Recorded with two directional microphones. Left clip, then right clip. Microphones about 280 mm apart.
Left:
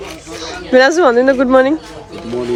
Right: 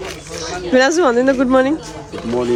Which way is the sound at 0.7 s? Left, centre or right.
Centre.